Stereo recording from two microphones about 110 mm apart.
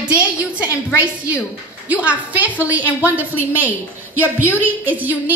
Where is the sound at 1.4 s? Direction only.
10° right (ahead or behind).